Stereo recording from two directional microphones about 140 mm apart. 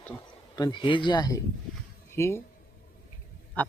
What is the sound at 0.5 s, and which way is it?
Speech, 30° left (ahead or behind).